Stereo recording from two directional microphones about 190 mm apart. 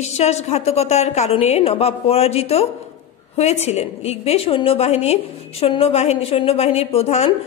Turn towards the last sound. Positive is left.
turn(degrees=35)  # may be behind; listen again after turning